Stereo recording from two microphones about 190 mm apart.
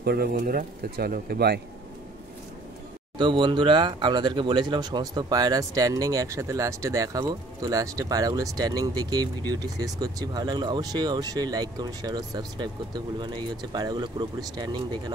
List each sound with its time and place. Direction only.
0.0 s speech: 55° right (ahead or behind)
3.2 s speech: 25° right (ahead or behind)